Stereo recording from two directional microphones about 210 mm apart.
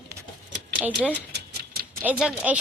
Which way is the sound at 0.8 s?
5° right (ahead or behind).